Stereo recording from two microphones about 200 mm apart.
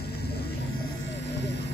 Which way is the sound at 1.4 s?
60° left (ahead or behind).